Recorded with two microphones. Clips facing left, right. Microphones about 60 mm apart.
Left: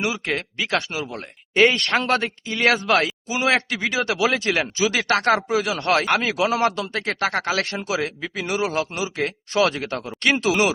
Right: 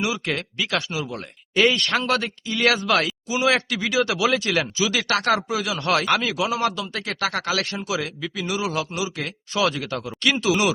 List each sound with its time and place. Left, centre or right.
0.0 s speech: left
6.6 s a man's voice: left
6.9 s a man's voice: left